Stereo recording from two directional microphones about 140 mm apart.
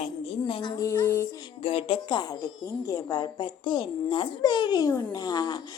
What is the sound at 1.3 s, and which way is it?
Speech, 35° left (ahead or behind).